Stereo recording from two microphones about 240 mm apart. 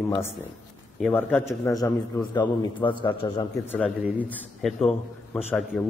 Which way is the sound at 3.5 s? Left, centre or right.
Centre.